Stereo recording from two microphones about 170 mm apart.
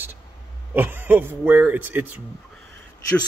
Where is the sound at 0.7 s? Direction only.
10° right (ahead or behind).